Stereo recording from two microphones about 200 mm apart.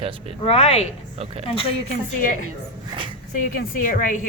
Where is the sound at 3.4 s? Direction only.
45° left (ahead or behind).